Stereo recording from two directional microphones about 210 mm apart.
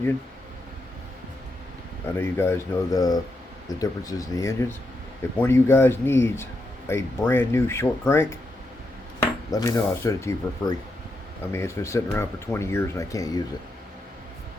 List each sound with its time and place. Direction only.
2.0 s speech: 10° left (ahead or behind)
9.5 s speech: 15° left (ahead or behind)